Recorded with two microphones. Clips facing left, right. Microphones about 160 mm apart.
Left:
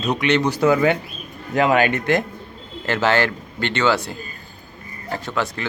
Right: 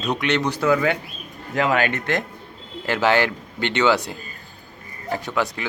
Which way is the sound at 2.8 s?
10° right (ahead or behind).